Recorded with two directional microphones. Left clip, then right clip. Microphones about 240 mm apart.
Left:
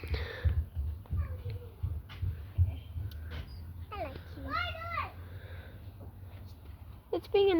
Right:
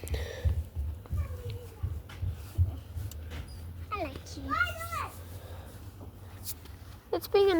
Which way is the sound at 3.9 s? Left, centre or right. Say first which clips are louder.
Right 5 dB; right.